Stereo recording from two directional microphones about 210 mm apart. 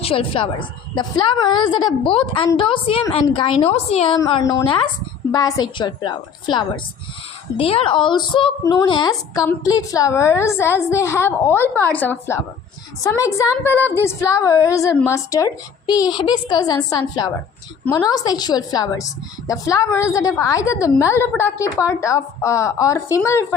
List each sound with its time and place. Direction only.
0.0 s a woman's voice: 25° left (ahead or behind)